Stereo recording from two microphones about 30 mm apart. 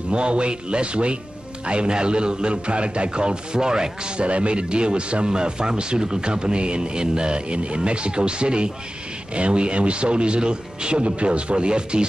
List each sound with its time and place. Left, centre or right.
0.1 s speech: right
4.2 s speech: right